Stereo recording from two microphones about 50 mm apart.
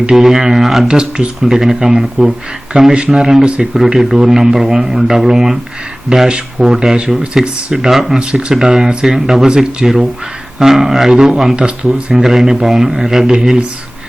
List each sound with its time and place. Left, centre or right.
0.0 s speech: centre
0.9 s speech: centre
8.2 s speech: centre
12.1 s speech: centre